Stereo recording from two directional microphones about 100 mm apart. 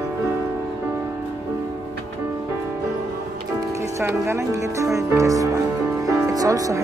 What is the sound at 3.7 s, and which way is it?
Music, 30° right (ahead or behind).